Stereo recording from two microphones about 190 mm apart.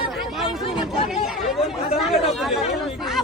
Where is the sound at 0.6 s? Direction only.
30° left (ahead or behind).